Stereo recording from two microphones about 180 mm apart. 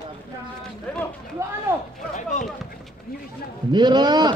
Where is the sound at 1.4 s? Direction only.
15° right (ahead or behind).